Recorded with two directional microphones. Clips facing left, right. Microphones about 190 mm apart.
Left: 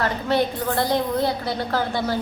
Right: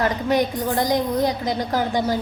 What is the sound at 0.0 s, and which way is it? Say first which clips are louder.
A woman's voice: right 2 dB; 15° right (ahead or behind).